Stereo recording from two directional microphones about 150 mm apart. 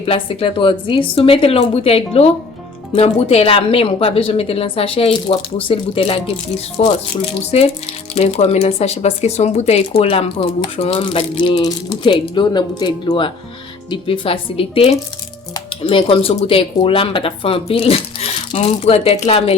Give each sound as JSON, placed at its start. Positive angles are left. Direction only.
{"t": 0.0, "sound": "speech", "side_deg": 40}
{"t": 8.1, "sound": "speech", "side_deg": 45}